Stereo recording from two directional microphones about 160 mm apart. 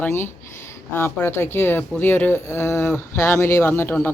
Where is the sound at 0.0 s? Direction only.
15° left (ahead or behind).